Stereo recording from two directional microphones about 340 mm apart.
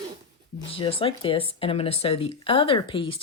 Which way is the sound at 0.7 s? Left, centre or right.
Centre.